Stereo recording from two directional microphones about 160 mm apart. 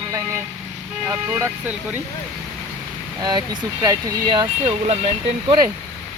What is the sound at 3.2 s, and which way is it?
Speech, 25° right (ahead or behind).